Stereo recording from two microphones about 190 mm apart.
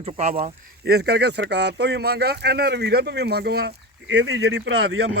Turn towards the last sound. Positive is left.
turn(degrees=-80)